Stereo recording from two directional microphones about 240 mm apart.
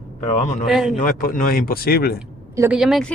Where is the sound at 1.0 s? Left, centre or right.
Left.